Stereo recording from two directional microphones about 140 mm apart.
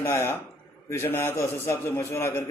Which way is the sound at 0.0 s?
20° left (ahead or behind).